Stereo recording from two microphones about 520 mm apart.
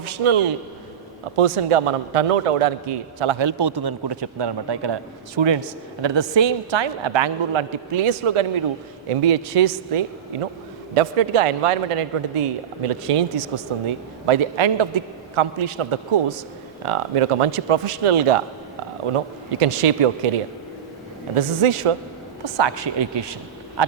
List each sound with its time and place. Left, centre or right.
0.0 s a man's voice: right
1.4 s a man's voice: right
9.0 s a man's voice: right
21.3 s a man's voice: right
22.4 s speech: right